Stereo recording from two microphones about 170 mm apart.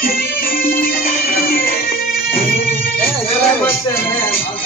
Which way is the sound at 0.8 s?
60° left (ahead or behind).